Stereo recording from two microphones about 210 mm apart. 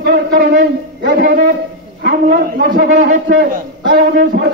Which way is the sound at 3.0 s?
40° right (ahead or behind).